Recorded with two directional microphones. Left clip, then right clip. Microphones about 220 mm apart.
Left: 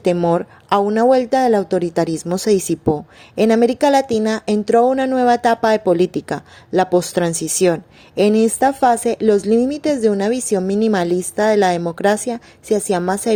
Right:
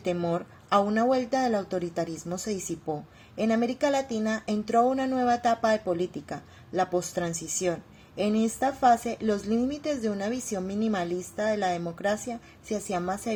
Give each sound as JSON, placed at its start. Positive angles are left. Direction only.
{"t": 0.0, "sound": "speech", "side_deg": 40}